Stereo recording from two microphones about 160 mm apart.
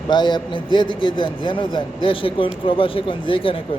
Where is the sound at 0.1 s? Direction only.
30° left (ahead or behind).